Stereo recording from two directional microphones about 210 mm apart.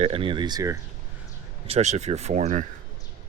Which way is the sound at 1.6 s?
30° right (ahead or behind).